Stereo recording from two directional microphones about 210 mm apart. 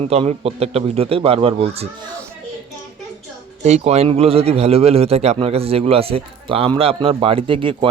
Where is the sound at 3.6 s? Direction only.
30° right (ahead or behind).